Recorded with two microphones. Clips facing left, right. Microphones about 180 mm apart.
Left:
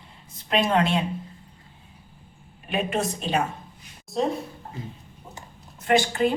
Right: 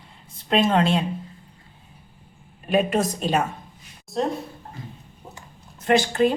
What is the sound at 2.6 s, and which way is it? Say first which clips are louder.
Speech: right 5 dB; 40° right (ahead or behind).